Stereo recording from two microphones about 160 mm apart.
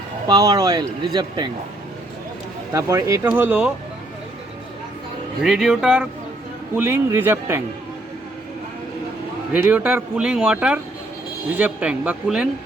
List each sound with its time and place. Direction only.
0.3 s speech: 25° right (ahead or behind)
2.7 s speech: 20° right (ahead or behind)
5.4 s speech: centre (ahead or behind)
6.7 s speech: 15° right (ahead or behind)
9.5 s speech: 10° right (ahead or behind)